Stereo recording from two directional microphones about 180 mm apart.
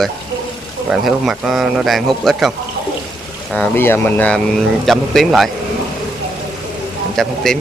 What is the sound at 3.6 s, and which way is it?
Speech, 10° left (ahead or behind).